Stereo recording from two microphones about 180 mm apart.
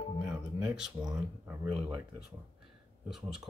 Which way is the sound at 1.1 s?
15° right (ahead or behind).